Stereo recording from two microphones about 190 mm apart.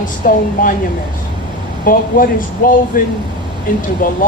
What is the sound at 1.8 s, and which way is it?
Speech, 45° left (ahead or behind).